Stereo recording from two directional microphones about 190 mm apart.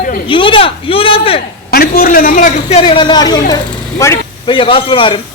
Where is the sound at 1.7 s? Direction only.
50° left (ahead or behind); by 4.2 s 15° left (ahead or behind).